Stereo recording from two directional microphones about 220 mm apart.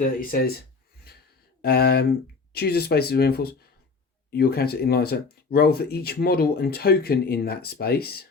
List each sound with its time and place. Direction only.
0.0 s speech: 40° left (ahead or behind)
1.1 s gasp: 45° left (ahead or behind)
1.6 s speech: 45° left (ahead or behind)